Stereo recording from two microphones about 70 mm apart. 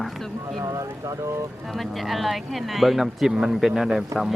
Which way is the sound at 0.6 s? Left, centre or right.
Right.